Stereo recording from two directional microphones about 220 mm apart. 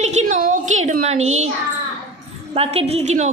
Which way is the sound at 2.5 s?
25° right (ahead or behind).